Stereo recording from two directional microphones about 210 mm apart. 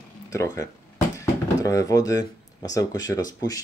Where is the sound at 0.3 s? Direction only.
15° left (ahead or behind).